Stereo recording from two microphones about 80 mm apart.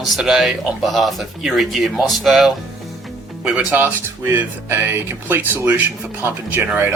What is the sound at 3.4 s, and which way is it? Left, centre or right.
Speech, centre.